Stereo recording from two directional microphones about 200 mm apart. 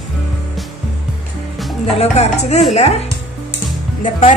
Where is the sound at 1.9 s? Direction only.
30° left (ahead or behind).